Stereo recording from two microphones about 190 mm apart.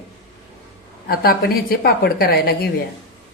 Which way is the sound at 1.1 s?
50° left (ahead or behind).